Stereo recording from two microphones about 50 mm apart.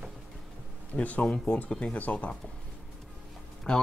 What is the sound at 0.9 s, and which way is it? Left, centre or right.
Speech, left.